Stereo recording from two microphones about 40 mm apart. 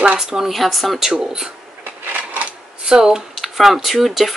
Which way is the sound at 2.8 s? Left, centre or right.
Centre.